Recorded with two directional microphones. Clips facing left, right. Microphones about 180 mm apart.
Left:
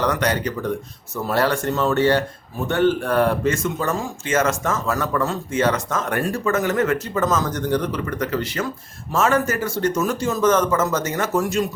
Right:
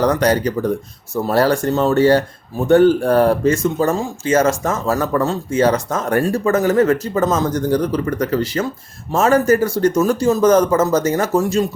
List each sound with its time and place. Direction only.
0.0 s speech: 35° right (ahead or behind)